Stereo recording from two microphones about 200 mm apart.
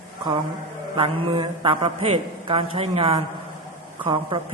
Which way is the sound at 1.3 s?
30° right (ahead or behind).